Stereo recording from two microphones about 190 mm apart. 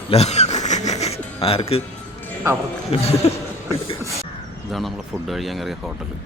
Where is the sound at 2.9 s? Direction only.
30° left (ahead or behind).